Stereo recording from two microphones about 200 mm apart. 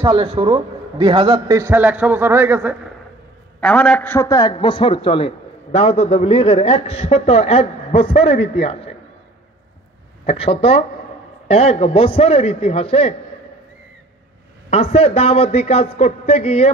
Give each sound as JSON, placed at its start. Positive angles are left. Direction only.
{"t": 0.0, "sound": "a man's voice", "side_deg": -20}
{"t": 3.6, "sound": "a man's voice", "side_deg": 5}
{"t": 10.2, "sound": "a man's voice", "side_deg": 30}
{"t": 14.7, "sound": "a man's voice", "side_deg": 30}